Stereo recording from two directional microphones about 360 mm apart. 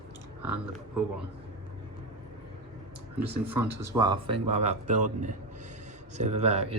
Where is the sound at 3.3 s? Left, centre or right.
Centre.